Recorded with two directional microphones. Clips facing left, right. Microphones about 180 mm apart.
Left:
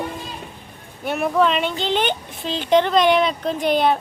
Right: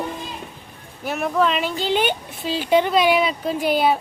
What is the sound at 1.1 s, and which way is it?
Speech, centre (ahead or behind).